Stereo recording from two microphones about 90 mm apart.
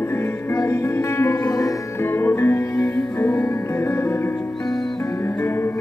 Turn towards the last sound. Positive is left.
turn(degrees=30)  # may be behind; listen again after turning